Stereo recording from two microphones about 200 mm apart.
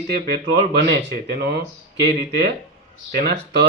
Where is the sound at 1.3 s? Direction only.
55° right (ahead or behind).